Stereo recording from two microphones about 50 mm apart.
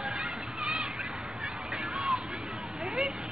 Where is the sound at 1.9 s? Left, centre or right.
Centre.